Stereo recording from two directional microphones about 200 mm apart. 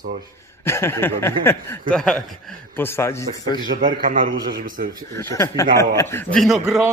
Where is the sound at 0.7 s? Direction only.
15° left (ahead or behind).